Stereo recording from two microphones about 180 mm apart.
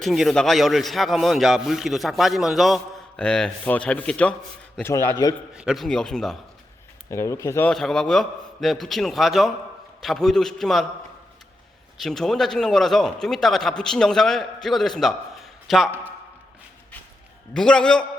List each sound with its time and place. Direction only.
0.0 s a man's voice: centre (ahead or behind); by 5.3 s 20° left (ahead or behind)
5.5 s a man's voice: centre (ahead or behind)
7.1 s speech: 15° left (ahead or behind)
7.7 s a man's voice: centre (ahead or behind)
11.9 s a man's voice: centre (ahead or behind)
17.5 s a man's voice: 5° left (ahead or behind)